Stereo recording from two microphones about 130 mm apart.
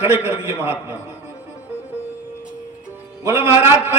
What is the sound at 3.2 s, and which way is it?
Speech, 15° right (ahead or behind).